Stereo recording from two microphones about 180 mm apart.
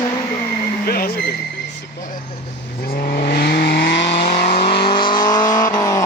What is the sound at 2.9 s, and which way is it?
Vehicle, 50° left (ahead or behind).